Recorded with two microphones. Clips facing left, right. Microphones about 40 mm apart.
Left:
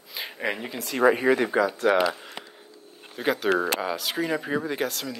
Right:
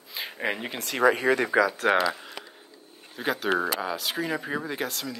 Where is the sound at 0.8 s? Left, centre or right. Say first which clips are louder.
Left 2 dB; right.